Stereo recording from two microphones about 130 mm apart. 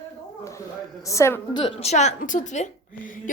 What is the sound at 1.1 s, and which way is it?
Speech, 20° left (ahead or behind).